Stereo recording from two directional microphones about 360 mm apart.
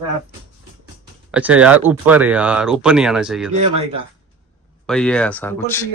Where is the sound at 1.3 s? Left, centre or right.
Centre.